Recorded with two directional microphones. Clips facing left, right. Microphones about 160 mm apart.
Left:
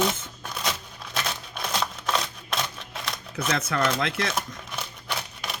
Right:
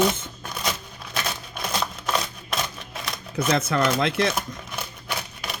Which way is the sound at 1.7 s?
Centre (ahead or behind).